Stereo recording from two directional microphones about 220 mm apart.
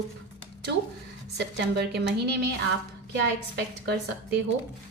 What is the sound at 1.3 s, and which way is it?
A woman's voice, 50° right (ahead or behind).